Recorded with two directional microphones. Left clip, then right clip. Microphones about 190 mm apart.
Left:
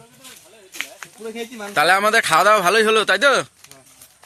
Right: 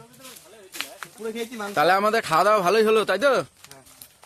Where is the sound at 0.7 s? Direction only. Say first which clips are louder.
Left 3 dB; centre (ahead or behind).